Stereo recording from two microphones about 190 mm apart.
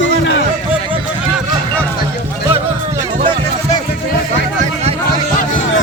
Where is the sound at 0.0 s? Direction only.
80° left.